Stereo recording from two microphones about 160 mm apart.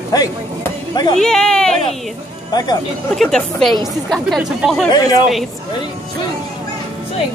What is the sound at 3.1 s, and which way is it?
Speech, 5° left (ahead or behind).